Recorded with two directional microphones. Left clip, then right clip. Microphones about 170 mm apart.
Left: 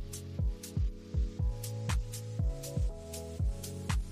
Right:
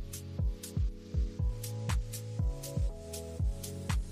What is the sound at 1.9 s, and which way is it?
Music, centre (ahead or behind).